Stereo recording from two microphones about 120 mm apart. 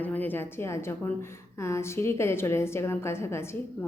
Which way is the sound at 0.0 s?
15° left (ahead or behind).